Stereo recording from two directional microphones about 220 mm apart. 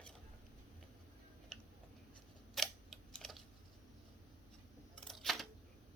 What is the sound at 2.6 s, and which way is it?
Typing, centre (ahead or behind).